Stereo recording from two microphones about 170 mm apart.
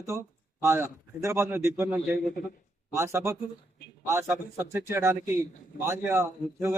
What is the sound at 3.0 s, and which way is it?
A man's voice, 15° right (ahead or behind).